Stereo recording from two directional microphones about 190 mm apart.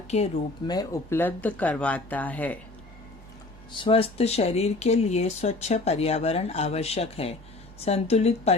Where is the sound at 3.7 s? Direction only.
30° left (ahead or behind).